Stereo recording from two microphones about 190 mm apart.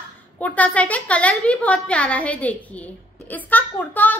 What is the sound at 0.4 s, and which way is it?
Speech, 5° left (ahead or behind).